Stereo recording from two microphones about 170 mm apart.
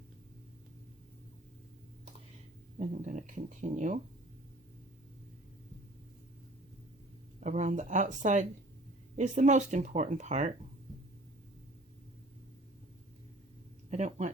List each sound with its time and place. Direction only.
2.7 s speech: 50° right (ahead or behind)
7.3 s speech: 45° right (ahead or behind)
13.9 s speech: 45° right (ahead or behind)